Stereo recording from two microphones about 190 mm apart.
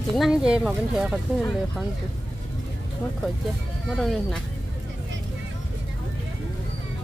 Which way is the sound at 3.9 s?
Centre (ahead or behind).